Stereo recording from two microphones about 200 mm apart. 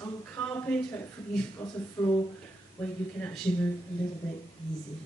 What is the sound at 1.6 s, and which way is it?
Speech, 15° left (ahead or behind).